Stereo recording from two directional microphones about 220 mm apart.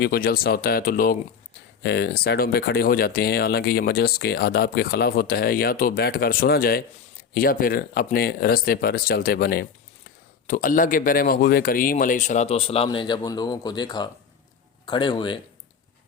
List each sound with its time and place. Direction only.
0.0 s speech: 45° left (ahead or behind); by 15.4 s 20° left (ahead or behind)